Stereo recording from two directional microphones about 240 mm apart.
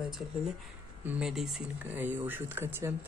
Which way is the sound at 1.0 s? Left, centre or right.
Centre.